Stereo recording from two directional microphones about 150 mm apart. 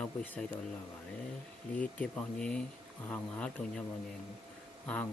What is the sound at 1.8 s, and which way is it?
Speech, 10° left (ahead or behind).